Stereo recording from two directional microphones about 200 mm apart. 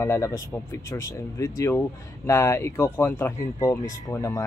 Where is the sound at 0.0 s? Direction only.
15° left (ahead or behind).